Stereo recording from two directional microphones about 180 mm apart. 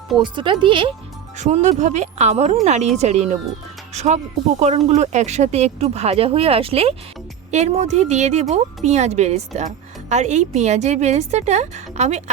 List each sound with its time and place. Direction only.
0.2 s speech: 25° right (ahead or behind)
1.4 s speech: 40° right (ahead or behind)